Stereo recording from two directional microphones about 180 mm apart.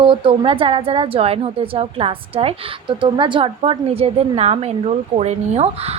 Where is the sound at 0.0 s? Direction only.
30° right (ahead or behind).